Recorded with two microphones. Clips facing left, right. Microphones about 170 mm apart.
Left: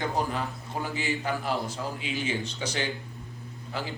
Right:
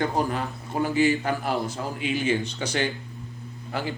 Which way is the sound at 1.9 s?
60° right (ahead or behind).